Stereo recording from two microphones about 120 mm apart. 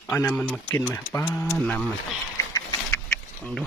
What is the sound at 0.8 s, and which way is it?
Speech, 20° left (ahead or behind).